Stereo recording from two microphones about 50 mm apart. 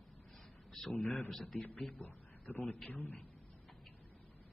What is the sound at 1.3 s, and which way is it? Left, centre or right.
Speech, centre.